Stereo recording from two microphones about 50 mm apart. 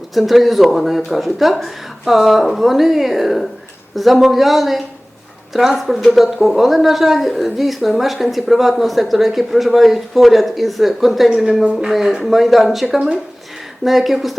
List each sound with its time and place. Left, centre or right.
0.1 s a woman's voice: centre
11.6 s a woman's voice: centre